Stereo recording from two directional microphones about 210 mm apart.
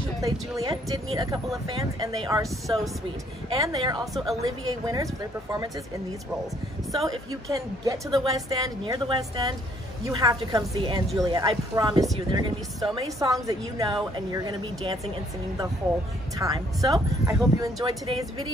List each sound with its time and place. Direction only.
0.2 s a woman's voice: 15° right (ahead or behind)
3.5 s a woman's voice: 15° right (ahead or behind)
4.1 s a woman's voice: centre (ahead or behind)
4.4 s a woman's voice: 15° right (ahead or behind)
7.0 s a woman's voice: 15° right (ahead or behind)
16.3 s a woman's voice: 15° right (ahead or behind)